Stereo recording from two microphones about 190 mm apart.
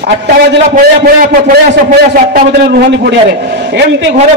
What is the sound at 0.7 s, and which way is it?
A man's voice, 45° right (ahead or behind).